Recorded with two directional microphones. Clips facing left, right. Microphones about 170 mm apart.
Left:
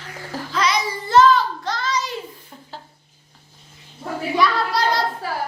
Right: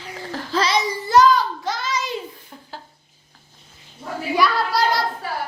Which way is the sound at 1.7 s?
10° right (ahead or behind).